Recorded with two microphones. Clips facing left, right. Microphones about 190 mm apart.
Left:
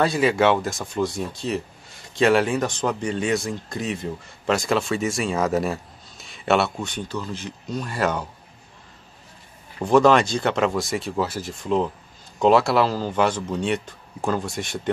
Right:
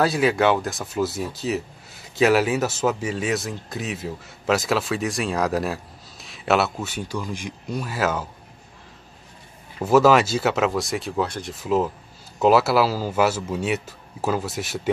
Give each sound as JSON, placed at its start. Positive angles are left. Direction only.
{"t": 0.0, "sound": "speech", "side_deg": 0}
{"t": 9.8, "sound": "speech", "side_deg": -5}